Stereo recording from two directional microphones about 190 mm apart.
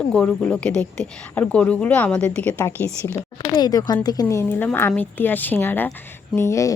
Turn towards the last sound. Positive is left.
turn(degrees=15)  # may be behind; listen again after turning